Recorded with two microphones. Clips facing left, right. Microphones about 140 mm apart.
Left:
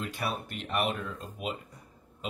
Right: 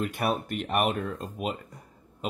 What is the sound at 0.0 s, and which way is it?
Speech, 50° right (ahead or behind).